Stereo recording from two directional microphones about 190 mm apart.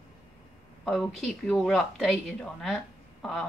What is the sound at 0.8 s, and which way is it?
Speech, 5° left (ahead or behind).